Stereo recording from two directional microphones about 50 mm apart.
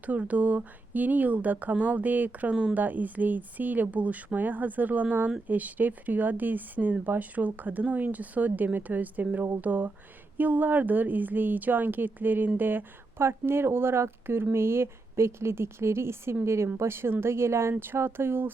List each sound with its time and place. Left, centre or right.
0.0 s speech: right
13.1 s a woman's voice: right